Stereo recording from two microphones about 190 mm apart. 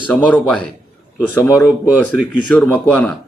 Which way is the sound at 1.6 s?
5° right (ahead or behind).